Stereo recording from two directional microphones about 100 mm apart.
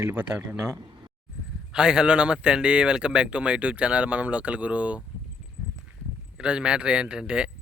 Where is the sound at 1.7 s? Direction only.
10° right (ahead or behind).